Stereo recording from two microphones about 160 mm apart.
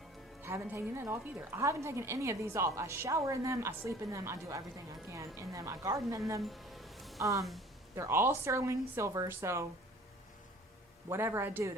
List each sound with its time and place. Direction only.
0.4 s a woman's voice: 15° right (ahead or behind)
6.4 s music: centre (ahead or behind)
7.2 s a woman's voice: 20° right (ahead or behind)
11.1 s a woman's voice: 15° right (ahead or behind)